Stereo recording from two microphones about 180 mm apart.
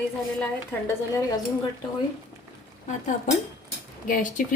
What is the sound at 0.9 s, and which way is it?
Dishes, 15° left (ahead or behind).